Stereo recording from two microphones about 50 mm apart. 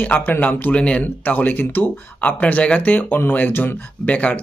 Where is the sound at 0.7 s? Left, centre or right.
Left.